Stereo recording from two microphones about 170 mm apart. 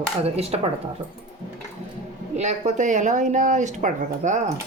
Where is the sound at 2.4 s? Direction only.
45° right (ahead or behind).